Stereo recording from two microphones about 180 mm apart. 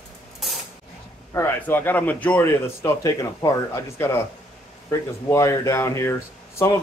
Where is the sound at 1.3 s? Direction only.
10° left (ahead or behind).